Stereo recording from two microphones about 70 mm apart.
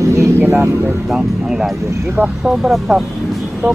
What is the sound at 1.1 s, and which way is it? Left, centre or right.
Speech, centre.